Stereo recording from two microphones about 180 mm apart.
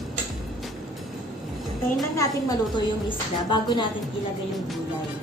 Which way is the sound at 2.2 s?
20° left (ahead or behind).